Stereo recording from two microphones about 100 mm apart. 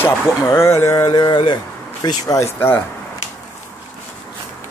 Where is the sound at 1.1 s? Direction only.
50° left (ahead or behind).